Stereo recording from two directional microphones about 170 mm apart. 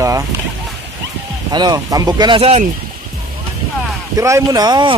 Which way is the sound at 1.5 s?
25° right (ahead or behind).